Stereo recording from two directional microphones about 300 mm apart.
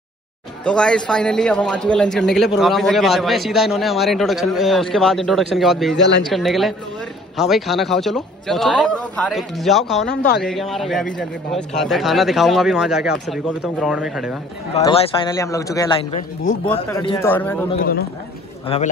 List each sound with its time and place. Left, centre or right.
0.7 s a man's voice: centre
5.9 s speech: left
6.2 s a man's voice: centre
14.7 s a man's voice: centre
18.7 s a man's voice: centre